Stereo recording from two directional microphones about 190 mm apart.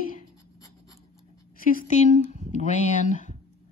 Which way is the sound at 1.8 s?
40° left (ahead or behind).